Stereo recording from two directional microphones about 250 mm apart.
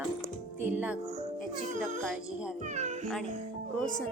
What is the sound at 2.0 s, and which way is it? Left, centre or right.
Speech, centre.